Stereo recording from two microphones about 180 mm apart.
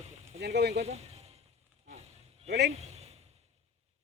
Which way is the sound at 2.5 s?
70° right (ahead or behind).